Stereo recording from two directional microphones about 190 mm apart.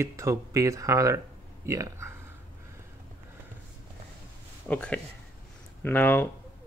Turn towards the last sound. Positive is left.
turn(degrees=10)  # may be behind; listen again after turning